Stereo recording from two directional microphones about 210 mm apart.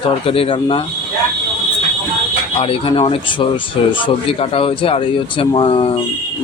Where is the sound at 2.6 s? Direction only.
25° left (ahead or behind).